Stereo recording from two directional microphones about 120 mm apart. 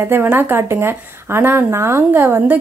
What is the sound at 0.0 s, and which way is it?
A woman's voice, 20° right (ahead or behind).